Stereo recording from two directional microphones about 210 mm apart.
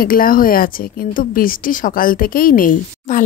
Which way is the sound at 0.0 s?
45° left (ahead or behind).